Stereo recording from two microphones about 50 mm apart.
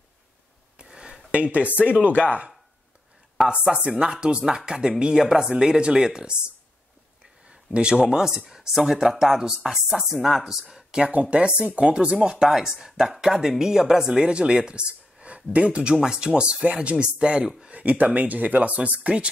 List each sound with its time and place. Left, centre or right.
1.3 s speech: right
3.3 s speech: centre
7.4 s speech: centre
11.1 s speech: right